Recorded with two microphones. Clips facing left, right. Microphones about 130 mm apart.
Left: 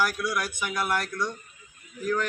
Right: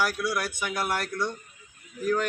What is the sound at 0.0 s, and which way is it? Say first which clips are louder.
Speech: even; centre (ahead or behind).